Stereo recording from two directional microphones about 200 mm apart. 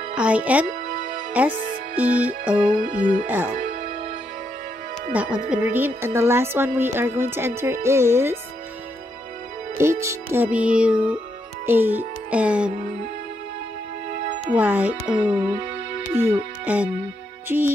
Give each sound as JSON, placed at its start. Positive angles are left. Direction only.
{"t": 0.1, "sound": "speech", "side_deg": -5}
{"t": 0.8, "sound": "music", "side_deg": -40}
{"t": 1.5, "sound": "speech", "side_deg": -45}
{"t": 2.0, "sound": "a woman's voice", "side_deg": -5}
{"t": 2.8, "sound": "speech", "side_deg": -40}
{"t": 3.5, "sound": "music", "side_deg": -35}
{"t": 5.1, "sound": "a woman's voice", "side_deg": -5}
{"t": 9.8, "sound": "a woman's voice", "side_deg": -15}
{"t": 14.5, "sound": "a woman's voice", "side_deg": -10}